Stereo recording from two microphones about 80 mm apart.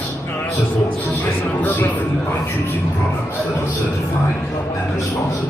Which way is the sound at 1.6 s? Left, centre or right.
Left.